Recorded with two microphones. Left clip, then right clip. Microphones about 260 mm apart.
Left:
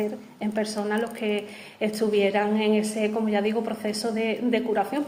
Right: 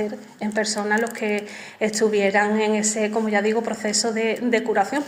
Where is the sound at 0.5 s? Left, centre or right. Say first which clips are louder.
Right 5 dB; right.